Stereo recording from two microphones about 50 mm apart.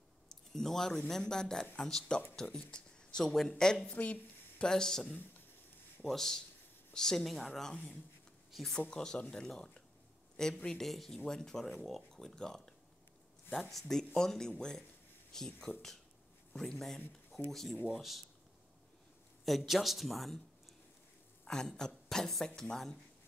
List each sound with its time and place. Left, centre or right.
0.5 s speech: centre
2.7 s a sound: centre
3.3 s speech: centre
3.9 s speech: left
4.6 s a woman's voice: centre
7.2 s speech: centre
8.9 s speech: centre
19.4 s a man's voice: centre
21.5 s speech: centre